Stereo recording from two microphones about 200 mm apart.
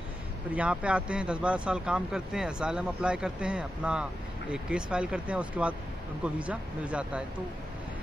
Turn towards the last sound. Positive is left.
turn(degrees=-5)  # may be behind; listen again after turning